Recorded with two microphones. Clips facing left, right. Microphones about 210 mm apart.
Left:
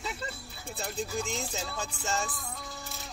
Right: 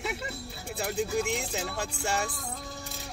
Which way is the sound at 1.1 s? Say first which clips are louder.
Right 5 dB; 65° right (ahead or behind).